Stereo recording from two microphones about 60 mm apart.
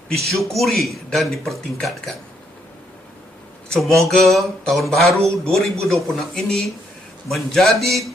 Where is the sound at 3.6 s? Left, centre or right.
Centre.